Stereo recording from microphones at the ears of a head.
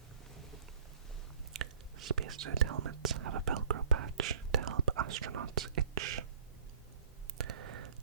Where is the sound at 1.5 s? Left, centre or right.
Right.